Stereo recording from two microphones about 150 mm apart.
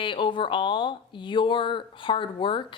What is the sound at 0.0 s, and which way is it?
A woman's voice, 35° left (ahead or behind).